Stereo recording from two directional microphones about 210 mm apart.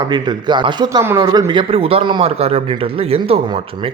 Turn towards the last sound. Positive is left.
turn(degrees=-30)  # may be behind; listen again after turning